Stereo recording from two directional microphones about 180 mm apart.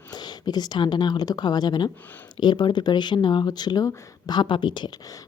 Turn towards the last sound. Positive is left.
turn(degrees=20)  # may be behind; listen again after turning